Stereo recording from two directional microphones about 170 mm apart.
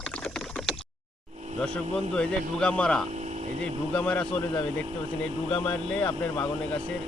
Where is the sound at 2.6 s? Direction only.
5° left (ahead or behind).